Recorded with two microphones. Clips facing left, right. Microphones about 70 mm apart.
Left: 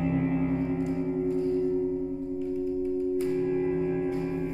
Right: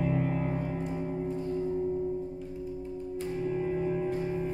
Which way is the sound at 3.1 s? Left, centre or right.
Centre.